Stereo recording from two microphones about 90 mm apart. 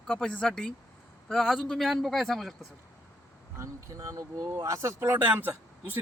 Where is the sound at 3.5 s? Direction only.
35° right (ahead or behind).